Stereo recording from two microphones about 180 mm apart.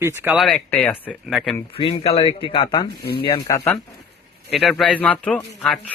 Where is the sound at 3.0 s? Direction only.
60° left (ahead or behind).